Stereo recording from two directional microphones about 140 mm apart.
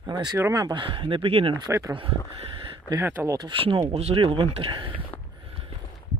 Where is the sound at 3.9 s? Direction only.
50° right (ahead or behind).